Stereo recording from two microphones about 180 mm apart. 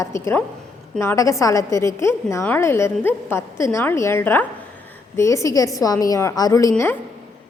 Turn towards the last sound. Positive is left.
turn(degrees=15)  # may be behind; listen again after turning